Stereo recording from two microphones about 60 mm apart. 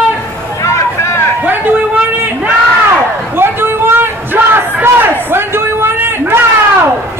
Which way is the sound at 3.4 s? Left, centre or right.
Right.